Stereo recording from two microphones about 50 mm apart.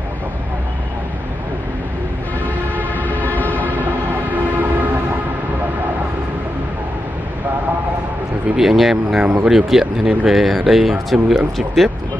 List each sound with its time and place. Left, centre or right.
3.0 s train: left
3.8 s train: right
8.5 s speech: centre